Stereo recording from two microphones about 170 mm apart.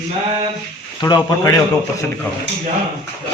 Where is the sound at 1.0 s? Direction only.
20° left (ahead or behind).